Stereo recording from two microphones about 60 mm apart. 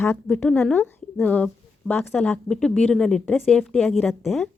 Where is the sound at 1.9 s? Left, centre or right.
Left.